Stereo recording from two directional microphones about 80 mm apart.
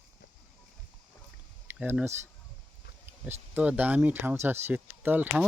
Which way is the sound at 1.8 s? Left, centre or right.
Centre.